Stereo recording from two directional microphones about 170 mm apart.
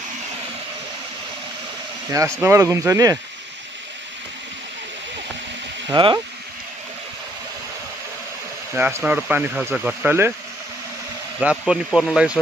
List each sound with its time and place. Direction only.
2.0 s speech: 20° right (ahead or behind)
5.9 s speech: 30° right (ahead or behind)
8.7 s speech: 10° right (ahead or behind)
11.3 s speech: 5° right (ahead or behind)